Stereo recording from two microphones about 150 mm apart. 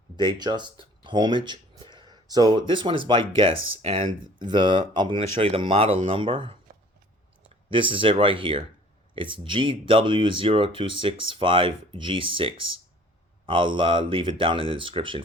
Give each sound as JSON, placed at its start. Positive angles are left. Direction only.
{"t": 0.2, "sound": "speech", "side_deg": -30}
{"t": 7.7, "sound": "speech", "side_deg": -35}